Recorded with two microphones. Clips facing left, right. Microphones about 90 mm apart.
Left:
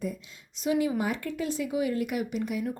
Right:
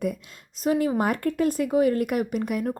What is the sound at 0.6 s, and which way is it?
Speech, 45° right (ahead or behind).